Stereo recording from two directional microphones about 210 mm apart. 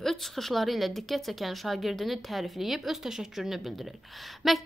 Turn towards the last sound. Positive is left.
turn(degrees=0)  # may be behind; listen again after turning